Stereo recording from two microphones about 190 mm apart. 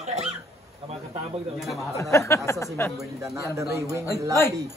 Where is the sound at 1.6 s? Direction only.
Centre (ahead or behind).